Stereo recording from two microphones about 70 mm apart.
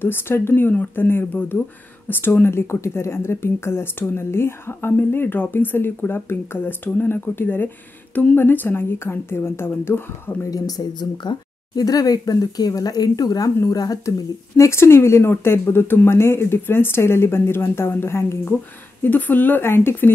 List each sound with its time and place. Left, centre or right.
0.0 s speech: left
10.5 s speech: left
14.6 s speech: left
19.0 s speech: left